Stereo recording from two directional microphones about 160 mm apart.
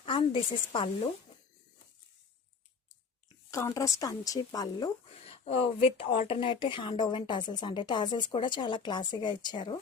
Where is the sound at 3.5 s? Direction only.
20° left (ahead or behind).